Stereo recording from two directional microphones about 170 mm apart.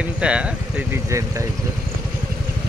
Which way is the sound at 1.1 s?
15° right (ahead or behind).